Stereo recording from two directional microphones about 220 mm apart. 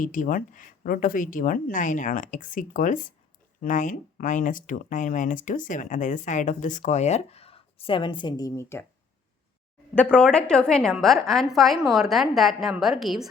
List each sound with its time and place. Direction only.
0.0 s speech: 35° left (ahead or behind); by 8.9 s 10° left (ahead or behind)
9.9 s a woman's voice: 5° left (ahead or behind)